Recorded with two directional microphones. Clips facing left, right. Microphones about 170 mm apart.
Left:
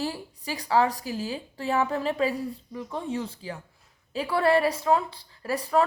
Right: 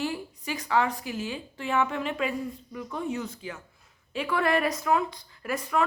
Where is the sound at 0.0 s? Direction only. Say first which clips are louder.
Even; 35° left (ahead or behind).